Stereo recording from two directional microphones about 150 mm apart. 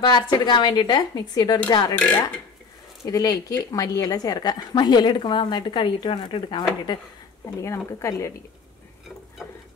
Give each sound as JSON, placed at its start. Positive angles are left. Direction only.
{"t": 0.0, "sound": "speech", "side_deg": 30}
{"t": 2.0, "sound": "speech", "side_deg": 10}
{"t": 3.1, "sound": "speech", "side_deg": 25}
{"t": 7.4, "sound": "speech", "side_deg": 20}
{"t": 9.4, "sound": "stir", "side_deg": 10}